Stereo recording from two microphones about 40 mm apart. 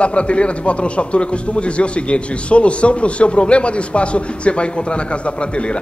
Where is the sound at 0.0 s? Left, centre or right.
Left.